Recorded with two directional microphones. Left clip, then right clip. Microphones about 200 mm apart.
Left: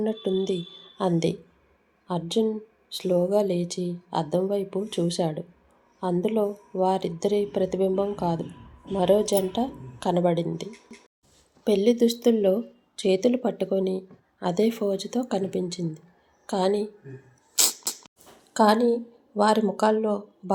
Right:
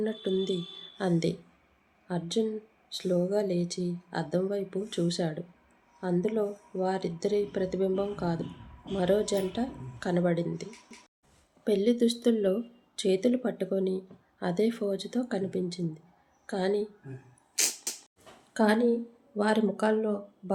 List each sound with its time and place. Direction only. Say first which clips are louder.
0.0 s speech: left 4 dB; 10° left (ahead or behind)
17.5 s a sound: left 5 dB; 15° left (ahead or behind)
18.5 s speech: left 6 dB; 10° left (ahead or behind)